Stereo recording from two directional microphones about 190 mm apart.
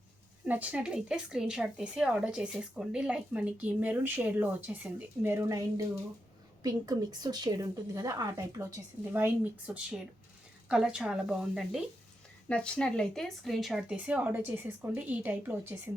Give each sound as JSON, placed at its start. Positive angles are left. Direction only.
{"t": 0.4, "sound": "a woman's voice", "side_deg": -10}